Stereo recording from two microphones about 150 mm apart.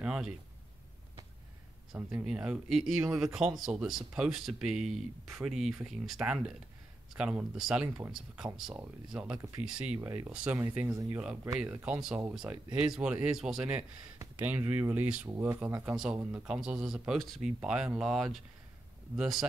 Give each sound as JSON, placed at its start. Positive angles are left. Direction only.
{"t": 0.0, "sound": "speech", "side_deg": -5}
{"t": 2.0, "sound": "speech", "side_deg": -10}
{"t": 14.1, "sound": "speech", "side_deg": -15}